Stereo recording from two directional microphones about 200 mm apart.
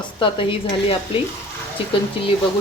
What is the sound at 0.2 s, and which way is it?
Speech, 25° left (ahead or behind).